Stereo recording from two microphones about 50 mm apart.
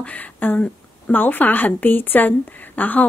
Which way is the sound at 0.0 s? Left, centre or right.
Left.